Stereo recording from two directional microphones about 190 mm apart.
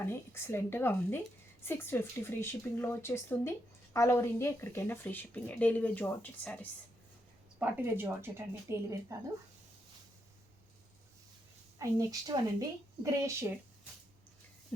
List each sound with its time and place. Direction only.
0.0 s speech: 15° left (ahead or behind)
7.6 s speech: 10° right (ahead or behind)
11.8 s speech: 20° right (ahead or behind)